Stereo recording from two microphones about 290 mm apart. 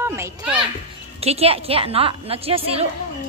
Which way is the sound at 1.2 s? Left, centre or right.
Right.